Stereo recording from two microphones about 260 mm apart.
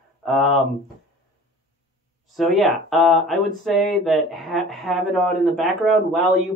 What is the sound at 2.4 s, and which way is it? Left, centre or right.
Speech, centre.